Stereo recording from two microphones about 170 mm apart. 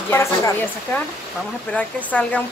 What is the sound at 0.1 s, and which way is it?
Speech, 15° left (ahead or behind).